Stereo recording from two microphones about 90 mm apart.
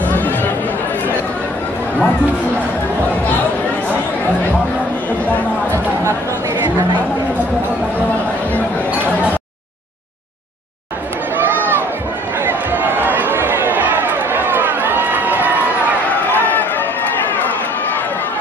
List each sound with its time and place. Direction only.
0.0 s chatter: 20° left (ahead or behind)
11.3 s a sound: 20° right (ahead or behind)
16.3 s run: 20° left (ahead or behind)